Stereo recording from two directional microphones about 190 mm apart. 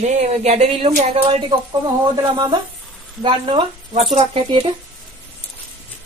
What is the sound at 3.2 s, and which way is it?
Speech, 25° right (ahead or behind).